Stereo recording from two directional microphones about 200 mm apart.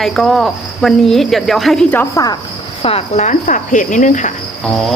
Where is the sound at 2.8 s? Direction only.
35° left (ahead or behind).